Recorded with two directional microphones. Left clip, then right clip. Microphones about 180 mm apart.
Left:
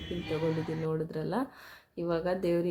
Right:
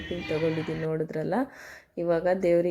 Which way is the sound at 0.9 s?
20° right (ahead or behind).